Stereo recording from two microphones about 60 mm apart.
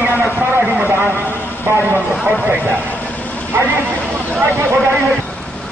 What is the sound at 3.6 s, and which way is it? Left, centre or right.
Speech, right.